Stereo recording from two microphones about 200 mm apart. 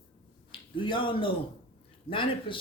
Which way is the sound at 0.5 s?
25° left (ahead or behind).